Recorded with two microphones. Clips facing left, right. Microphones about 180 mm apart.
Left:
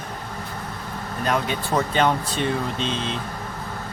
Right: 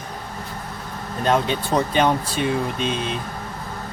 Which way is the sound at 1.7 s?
15° right (ahead or behind).